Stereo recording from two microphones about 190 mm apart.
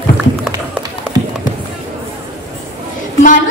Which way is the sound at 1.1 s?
20° right (ahead or behind).